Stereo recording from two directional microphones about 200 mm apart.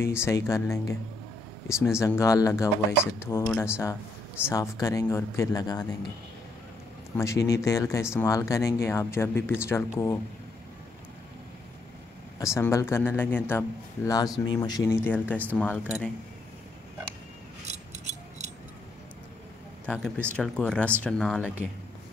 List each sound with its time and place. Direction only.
0.0 s speech: 15° left (ahead or behind)
7.2 s speech: 15° left (ahead or behind)
12.5 s speech: 15° left (ahead or behind)
19.9 s speech: 10° right (ahead or behind)
20.3 s speech: centre (ahead or behind)